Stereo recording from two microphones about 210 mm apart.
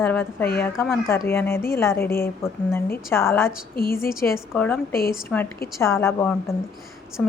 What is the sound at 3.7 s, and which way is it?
Speech, 45° left (ahead or behind).